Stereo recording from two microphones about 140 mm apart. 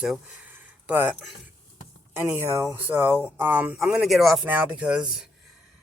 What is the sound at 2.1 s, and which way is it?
Speech, 20° right (ahead or behind).